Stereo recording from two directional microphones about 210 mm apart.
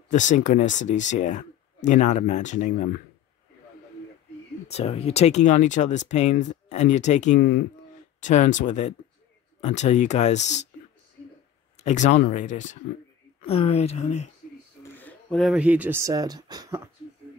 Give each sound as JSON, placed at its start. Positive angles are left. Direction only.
{"t": 0.1, "sound": "speech", "side_deg": 35}
{"t": 4.6, "sound": "speech", "side_deg": 30}
{"t": 7.3, "sound": "speech", "side_deg": 50}
{"t": 8.2, "sound": "speech", "side_deg": 35}
{"t": 11.8, "sound": "speech", "side_deg": 35}
{"t": 14.9, "sound": "speech", "side_deg": 10}